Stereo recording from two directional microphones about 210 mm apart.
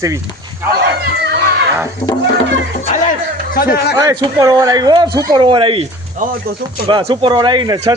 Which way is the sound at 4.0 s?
15° right (ahead or behind).